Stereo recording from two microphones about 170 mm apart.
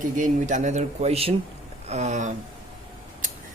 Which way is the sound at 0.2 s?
45° right (ahead or behind).